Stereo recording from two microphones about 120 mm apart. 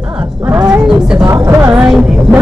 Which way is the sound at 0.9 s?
5° right (ahead or behind).